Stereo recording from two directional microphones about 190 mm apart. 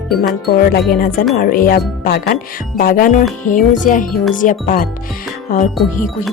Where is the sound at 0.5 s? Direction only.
55° left (ahead or behind).